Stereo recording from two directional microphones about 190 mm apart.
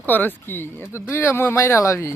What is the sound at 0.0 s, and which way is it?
Speech, 10° left (ahead or behind).